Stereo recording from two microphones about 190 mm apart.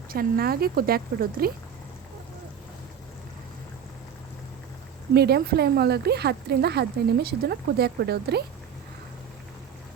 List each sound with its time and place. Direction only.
0.1 s speech: 50° right (ahead or behind)
5.1 s speech: 60° right (ahead or behind)